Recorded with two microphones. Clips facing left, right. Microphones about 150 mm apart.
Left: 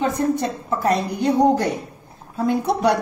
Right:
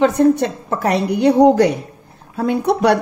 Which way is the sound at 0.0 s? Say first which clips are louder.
Right 7 dB; 75° right (ahead or behind).